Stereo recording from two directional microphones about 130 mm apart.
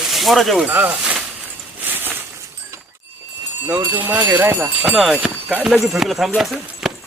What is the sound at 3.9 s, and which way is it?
Speech, 15° right (ahead or behind).